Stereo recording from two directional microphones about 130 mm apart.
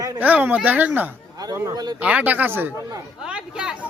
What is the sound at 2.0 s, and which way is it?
A man's voice, 10° right (ahead or behind).